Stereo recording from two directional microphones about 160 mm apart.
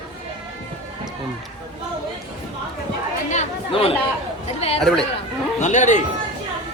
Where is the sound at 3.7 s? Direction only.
35° left (ahead or behind).